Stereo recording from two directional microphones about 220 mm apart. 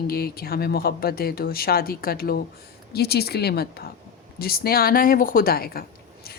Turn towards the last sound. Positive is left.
turn(degrees=45)  # may be behind; listen again after turning